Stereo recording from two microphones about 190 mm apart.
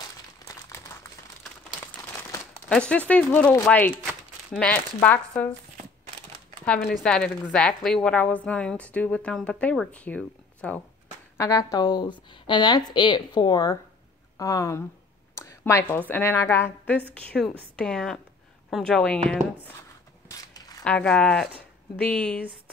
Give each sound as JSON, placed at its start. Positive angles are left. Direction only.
{"t": 0.5, "sound": "crumpling", "side_deg": 15}
{"t": 2.7, "sound": "speech", "side_deg": 5}
{"t": 7.0, "sound": "a woman's voice", "side_deg": 5}
{"t": 11.3, "sound": "a woman's voice", "side_deg": 20}
{"t": 20.2, "sound": "a sound", "side_deg": 20}
{"t": 20.8, "sound": "a woman's voice", "side_deg": 5}